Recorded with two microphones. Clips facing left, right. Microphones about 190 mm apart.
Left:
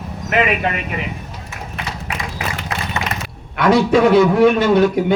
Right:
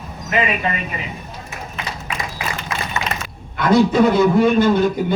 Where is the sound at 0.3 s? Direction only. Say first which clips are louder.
Left 3 dB; 65° left (ahead or behind).